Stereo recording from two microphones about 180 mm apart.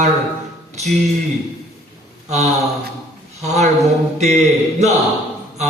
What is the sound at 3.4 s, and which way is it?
Speech, 40° right (ahead or behind).